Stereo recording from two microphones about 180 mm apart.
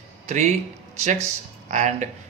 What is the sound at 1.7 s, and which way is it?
Speech, 40° right (ahead or behind).